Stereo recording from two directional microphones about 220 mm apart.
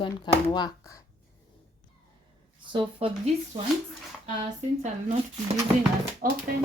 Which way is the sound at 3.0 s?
25° right (ahead or behind).